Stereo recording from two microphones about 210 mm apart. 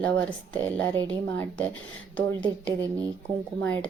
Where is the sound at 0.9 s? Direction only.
20° right (ahead or behind).